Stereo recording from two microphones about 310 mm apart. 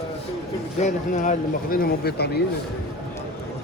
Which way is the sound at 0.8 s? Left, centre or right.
Left.